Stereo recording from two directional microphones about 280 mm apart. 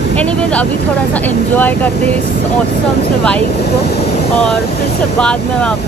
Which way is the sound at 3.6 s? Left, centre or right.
Left.